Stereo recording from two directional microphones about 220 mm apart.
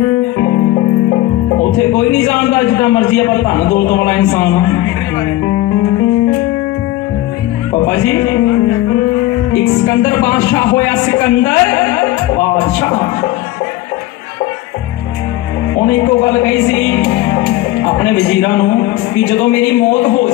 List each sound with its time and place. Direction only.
0.4 s music: 20° left (ahead or behind)
1.8 s speech: 10° left (ahead or behind)
7.8 s speech: 10° left (ahead or behind)
15.7 s speech: 15° left (ahead or behind)
17.1 s music: 15° left (ahead or behind)
17.5 s speech: 10° left (ahead or behind)